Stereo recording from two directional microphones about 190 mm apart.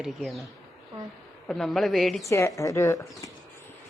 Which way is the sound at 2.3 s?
15° left (ahead or behind).